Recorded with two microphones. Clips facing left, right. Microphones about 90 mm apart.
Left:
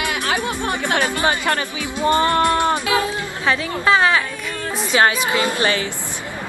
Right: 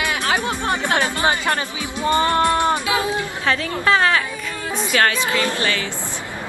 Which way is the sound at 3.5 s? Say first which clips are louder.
Left 1 dB; 15° left (ahead or behind).